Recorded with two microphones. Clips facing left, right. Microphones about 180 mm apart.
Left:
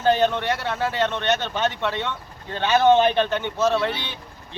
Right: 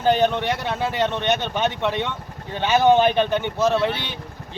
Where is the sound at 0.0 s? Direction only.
15° right (ahead or behind).